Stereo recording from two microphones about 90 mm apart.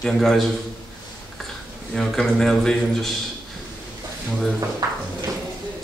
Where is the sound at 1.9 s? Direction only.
5° left (ahead or behind).